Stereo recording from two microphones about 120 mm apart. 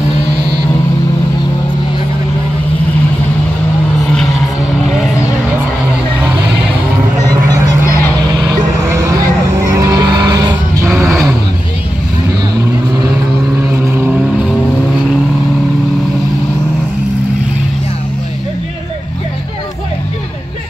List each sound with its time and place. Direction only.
8.5 s vehicle: 25° right (ahead or behind)
10.9 s vehicle: centre (ahead or behind)
13.7 s vehicle: 15° right (ahead or behind)